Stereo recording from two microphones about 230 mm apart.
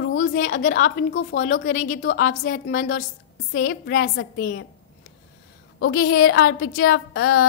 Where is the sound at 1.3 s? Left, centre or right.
Left.